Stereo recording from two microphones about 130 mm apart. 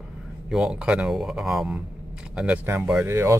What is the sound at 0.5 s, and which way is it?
Speech, 5° right (ahead or behind).